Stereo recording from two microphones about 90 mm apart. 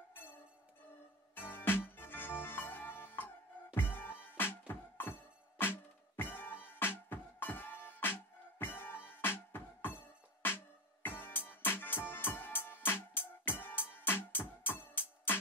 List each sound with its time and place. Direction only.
0.1 s music: 20° left (ahead or behind)